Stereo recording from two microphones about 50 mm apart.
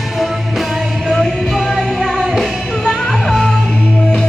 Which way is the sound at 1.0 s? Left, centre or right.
Centre.